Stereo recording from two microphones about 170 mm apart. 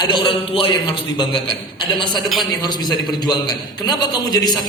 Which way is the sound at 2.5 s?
25° left (ahead or behind).